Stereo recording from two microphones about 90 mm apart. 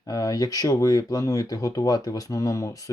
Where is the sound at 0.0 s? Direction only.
40° left (ahead or behind).